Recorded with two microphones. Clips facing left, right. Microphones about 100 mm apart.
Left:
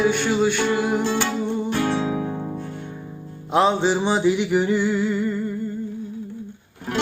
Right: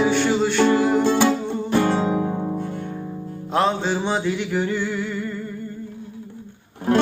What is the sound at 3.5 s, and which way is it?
Music, 15° left (ahead or behind).